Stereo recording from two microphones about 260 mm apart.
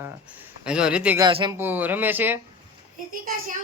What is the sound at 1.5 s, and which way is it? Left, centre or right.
Speech, centre.